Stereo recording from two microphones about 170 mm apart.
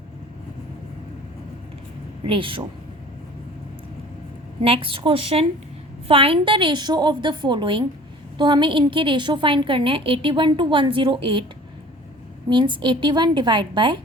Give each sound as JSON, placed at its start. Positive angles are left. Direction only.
{"t": 2.2, "sound": "a woman's voice", "side_deg": -30}
{"t": 4.6, "sound": "a woman's voice", "side_deg": -30}
{"t": 12.5, "sound": "a woman's voice", "side_deg": -30}